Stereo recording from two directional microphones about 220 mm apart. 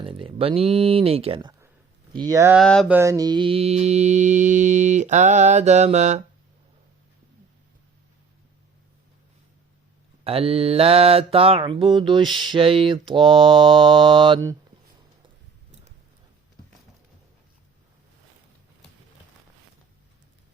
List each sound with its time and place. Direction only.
0.0 s mantra: 25° right (ahead or behind)
2.1 s speech: 15° right (ahead or behind)
2.6 s a sound: 5° left (ahead or behind)
2.9 s mantra: 15° right (ahead or behind); by 6.2 s 30° right (ahead or behind)
10.2 s mantra: 25° right (ahead or behind)